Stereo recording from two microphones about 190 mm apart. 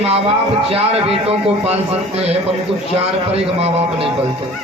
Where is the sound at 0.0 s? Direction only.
30° right (ahead or behind).